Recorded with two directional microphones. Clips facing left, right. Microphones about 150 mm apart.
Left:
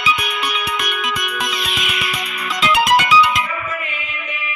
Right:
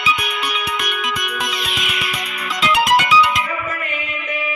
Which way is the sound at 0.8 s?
75° left (ahead or behind).